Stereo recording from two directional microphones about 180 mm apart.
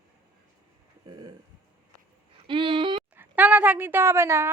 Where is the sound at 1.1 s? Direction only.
25° right (ahead or behind).